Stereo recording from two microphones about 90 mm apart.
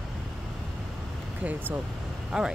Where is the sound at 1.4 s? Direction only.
20° right (ahead or behind).